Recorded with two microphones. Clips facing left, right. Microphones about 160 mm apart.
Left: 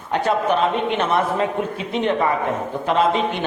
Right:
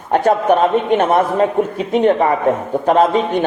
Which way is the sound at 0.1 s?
45° right (ahead or behind).